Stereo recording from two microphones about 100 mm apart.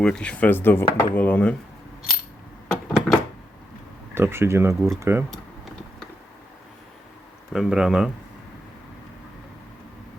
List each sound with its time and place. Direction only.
0.0 s speech: 10° left (ahead or behind)
2.6 s a sound: 5° left (ahead or behind)
4.1 s speech: 25° right (ahead or behind)
7.5 s speech: 5° right (ahead or behind)